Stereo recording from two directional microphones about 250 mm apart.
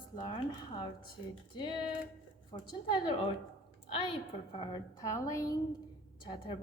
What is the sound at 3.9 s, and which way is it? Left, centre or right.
A woman's voice, left.